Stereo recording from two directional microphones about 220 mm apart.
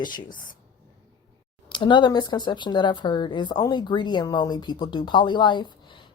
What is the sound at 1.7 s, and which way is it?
Speech, 20° left (ahead or behind).